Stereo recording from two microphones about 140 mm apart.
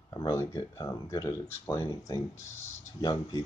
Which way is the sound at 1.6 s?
15° left (ahead or behind).